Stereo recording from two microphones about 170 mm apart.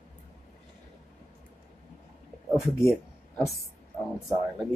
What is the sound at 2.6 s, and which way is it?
Speech, 15° left (ahead or behind).